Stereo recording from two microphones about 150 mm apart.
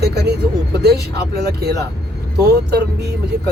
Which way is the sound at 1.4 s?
90° right.